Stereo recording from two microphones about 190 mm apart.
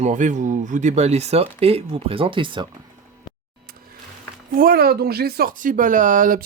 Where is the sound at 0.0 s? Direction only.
40° right (ahead or behind); by 2.6 s 25° right (ahead or behind).